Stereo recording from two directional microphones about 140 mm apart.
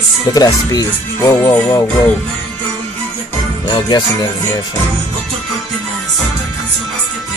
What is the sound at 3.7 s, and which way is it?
Speech, 30° left (ahead or behind).